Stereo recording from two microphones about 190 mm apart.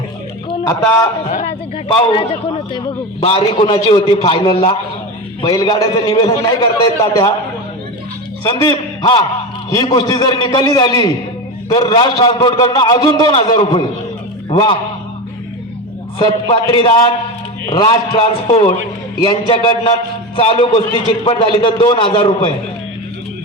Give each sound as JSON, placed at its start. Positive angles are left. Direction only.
{"t": 2.1, "sound": "a man's voice", "side_deg": 30}
{"t": 8.4, "sound": "a man's voice", "side_deg": 25}
{"t": 16.1, "sound": "a man's voice", "side_deg": 30}